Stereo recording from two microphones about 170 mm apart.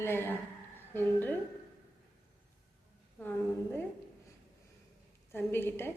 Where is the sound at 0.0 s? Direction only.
15° left (ahead or behind).